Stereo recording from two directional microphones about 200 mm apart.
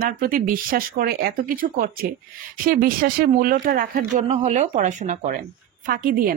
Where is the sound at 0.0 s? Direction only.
45° right (ahead or behind).